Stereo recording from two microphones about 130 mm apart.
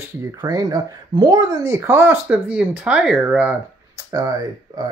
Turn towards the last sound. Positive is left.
turn(degrees=-30)  # may be behind; listen again after turning